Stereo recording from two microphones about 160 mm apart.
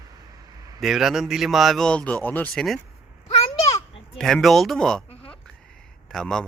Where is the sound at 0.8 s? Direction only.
Centre (ahead or behind).